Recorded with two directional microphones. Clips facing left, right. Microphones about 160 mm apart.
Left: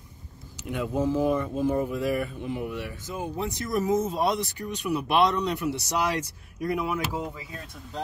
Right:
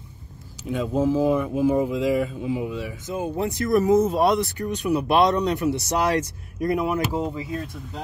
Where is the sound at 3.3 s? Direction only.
55° right (ahead or behind).